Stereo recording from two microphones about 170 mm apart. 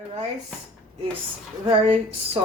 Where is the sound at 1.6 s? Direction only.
35° right (ahead or behind).